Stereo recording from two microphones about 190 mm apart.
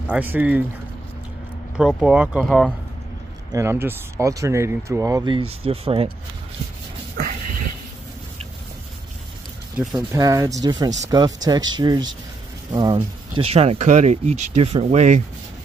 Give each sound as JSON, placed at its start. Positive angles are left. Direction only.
{"t": 0.0, "sound": "speech", "side_deg": -10}
{"t": 1.8, "sound": "speech", "side_deg": 0}
{"t": 3.5, "sound": "speech", "side_deg": -15}
{"t": 7.2, "sound": "a sound", "side_deg": -50}
{"t": 9.9, "sound": "speech", "side_deg": -20}